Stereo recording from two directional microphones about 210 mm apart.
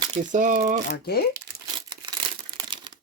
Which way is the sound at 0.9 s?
50° left (ahead or behind).